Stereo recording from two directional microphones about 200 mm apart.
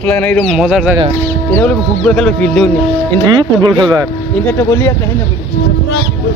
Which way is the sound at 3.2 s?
20° right (ahead or behind).